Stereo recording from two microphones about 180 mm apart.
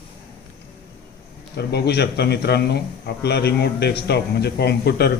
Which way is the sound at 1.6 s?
65° left (ahead or behind).